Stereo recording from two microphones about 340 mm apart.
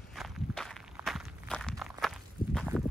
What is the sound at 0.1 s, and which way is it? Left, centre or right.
Walk, centre.